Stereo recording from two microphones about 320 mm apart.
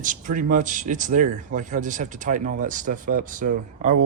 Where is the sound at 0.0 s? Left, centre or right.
Right.